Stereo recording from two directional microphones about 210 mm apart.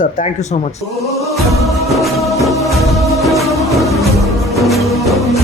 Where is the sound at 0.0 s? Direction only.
35° left (ahead or behind).